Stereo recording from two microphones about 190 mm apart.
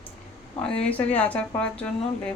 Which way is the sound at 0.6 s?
5° left (ahead or behind).